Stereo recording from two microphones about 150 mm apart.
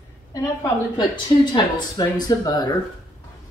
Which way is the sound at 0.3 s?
25° left (ahead or behind).